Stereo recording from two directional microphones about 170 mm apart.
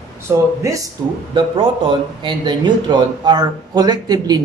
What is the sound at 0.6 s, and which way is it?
Speech, 20° right (ahead or behind).